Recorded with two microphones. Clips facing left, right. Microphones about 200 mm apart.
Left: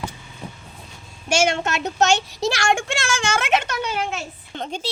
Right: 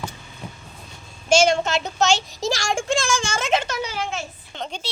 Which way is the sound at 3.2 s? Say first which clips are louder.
Left 2 dB; 65° left (ahead or behind).